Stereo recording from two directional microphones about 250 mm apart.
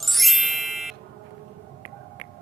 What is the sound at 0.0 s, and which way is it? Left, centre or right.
Music, centre.